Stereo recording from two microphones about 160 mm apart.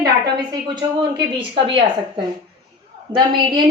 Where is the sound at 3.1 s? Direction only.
30° right (ahead or behind).